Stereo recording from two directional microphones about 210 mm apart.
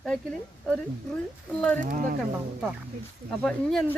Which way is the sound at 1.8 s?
40° right (ahead or behind).